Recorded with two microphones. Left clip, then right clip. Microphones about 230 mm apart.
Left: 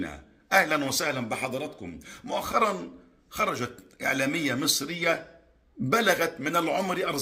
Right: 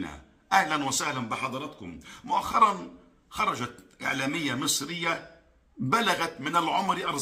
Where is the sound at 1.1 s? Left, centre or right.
Right.